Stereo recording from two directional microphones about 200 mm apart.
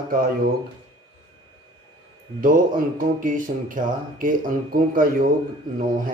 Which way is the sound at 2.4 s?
45° right (ahead or behind).